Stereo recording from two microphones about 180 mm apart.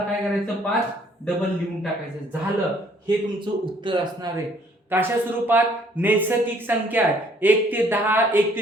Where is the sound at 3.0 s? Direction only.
25° right (ahead or behind).